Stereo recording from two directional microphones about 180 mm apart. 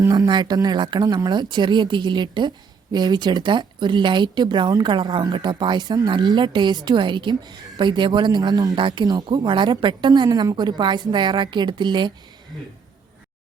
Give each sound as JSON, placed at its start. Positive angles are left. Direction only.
{"t": 0.0, "sound": "speech", "side_deg": -20}